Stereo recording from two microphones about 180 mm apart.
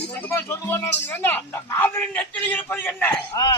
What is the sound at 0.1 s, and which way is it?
A man's voice, 10° left (ahead or behind).